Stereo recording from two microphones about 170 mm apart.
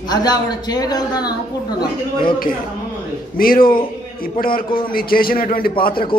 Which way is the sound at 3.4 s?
60° left (ahead or behind).